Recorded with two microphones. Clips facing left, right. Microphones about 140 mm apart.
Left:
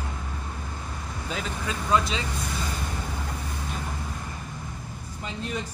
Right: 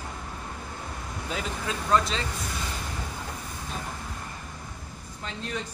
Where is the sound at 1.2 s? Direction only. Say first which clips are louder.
Even; centre (ahead or behind).